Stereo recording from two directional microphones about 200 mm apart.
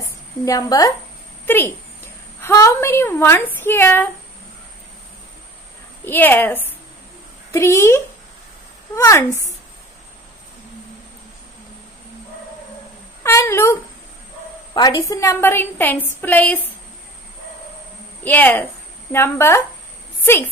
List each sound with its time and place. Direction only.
0.5 s a woman's voice: 15° left (ahead or behind)
6.0 s a woman's voice: 10° left (ahead or behind)
13.2 s a woman's voice: 15° left (ahead or behind)
18.2 s a woman's voice: 10° left (ahead or behind)